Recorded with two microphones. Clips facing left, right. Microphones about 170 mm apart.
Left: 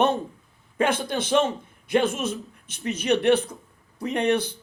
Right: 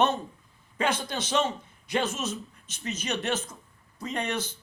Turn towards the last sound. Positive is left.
turn(degrees=60)  # may be behind; listen again after turning